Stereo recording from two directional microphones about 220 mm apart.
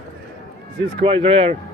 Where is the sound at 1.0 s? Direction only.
25° right (ahead or behind).